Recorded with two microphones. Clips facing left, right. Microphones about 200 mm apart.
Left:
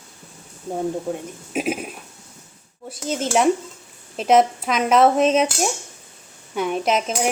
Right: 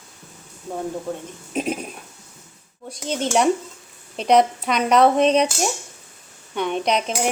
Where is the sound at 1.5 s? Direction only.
5° left (ahead or behind).